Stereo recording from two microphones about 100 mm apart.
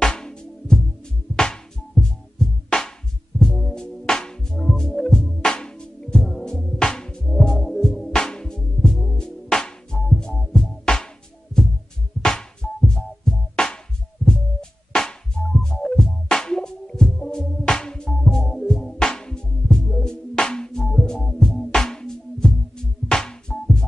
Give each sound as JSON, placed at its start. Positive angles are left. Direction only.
{"t": 0.0, "sound": "music", "side_deg": 5}
{"t": 12.2, "sound": "music", "side_deg": 5}